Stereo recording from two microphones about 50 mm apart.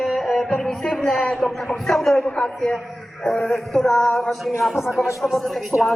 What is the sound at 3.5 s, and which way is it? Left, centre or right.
Speech, centre.